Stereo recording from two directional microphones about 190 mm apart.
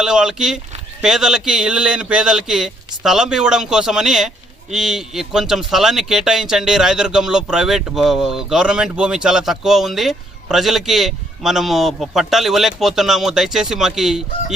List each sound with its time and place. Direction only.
0.0 s speech: 5° right (ahead or behind)